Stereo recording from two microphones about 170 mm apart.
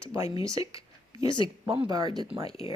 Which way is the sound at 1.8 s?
25° right (ahead or behind).